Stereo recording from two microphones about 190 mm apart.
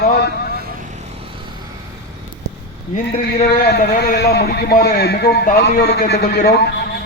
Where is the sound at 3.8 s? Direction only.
50° left (ahead or behind).